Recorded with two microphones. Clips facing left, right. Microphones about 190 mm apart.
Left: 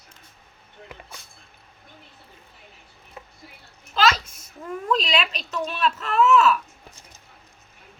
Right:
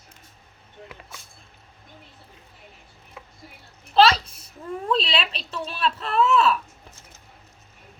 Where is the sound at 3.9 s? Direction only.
30° right (ahead or behind).